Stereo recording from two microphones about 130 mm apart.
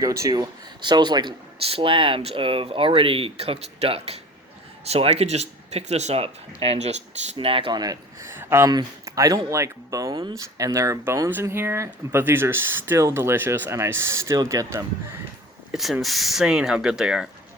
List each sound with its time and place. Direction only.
0.0 s speech: 25° right (ahead or behind); by 6.9 s 55° right (ahead or behind)
7.3 s speech: 45° right (ahead or behind)
8.3 s a sound: 20° right (ahead or behind)
8.7 s speech: 25° right (ahead or behind)
15.7 s speech: centre (ahead or behind)